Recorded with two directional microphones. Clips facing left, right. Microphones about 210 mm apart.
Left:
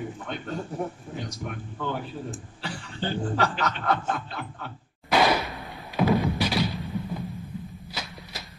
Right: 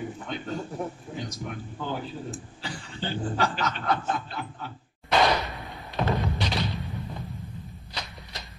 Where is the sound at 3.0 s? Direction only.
55° left (ahead or behind).